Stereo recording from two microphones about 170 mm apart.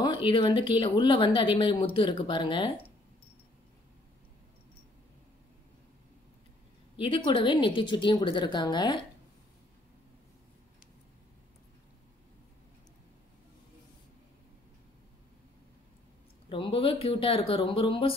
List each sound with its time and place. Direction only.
0.0 s speech: 30° left (ahead or behind)
7.0 s speech: 30° left (ahead or behind)
16.4 s speech: 30° left (ahead or behind)